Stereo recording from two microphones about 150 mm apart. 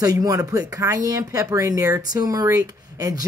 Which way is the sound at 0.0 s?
25° right (ahead or behind).